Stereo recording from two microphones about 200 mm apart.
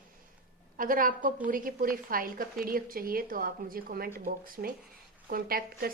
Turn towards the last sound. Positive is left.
turn(degrees=-45)  # may be behind; listen again after turning